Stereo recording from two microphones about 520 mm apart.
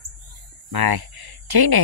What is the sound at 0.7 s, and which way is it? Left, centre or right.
Speech, right.